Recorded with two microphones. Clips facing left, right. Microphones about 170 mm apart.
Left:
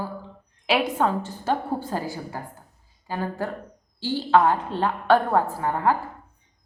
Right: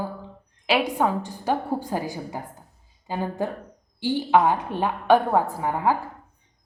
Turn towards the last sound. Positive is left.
turn(degrees=-10)  # may be behind; listen again after turning